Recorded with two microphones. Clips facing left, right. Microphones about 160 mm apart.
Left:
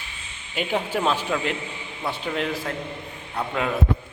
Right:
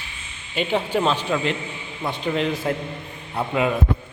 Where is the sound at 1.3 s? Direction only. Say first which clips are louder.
Right 2 dB; centre (ahead or behind).